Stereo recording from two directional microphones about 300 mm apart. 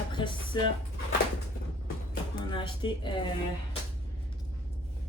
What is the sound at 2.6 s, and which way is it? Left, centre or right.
Speech, centre.